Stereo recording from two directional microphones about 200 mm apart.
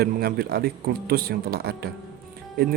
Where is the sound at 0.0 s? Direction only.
50° right (ahead or behind).